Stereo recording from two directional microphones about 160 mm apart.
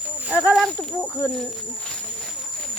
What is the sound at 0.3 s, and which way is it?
Speech, 5° right (ahead or behind).